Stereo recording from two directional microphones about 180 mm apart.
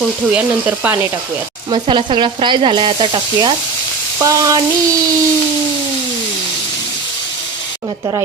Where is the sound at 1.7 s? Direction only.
25° right (ahead or behind).